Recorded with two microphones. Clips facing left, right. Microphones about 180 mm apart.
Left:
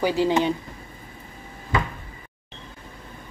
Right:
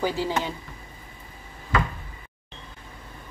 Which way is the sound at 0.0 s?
15° left (ahead or behind).